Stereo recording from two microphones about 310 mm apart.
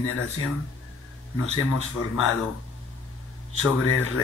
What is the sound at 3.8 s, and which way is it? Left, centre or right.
Speech, left.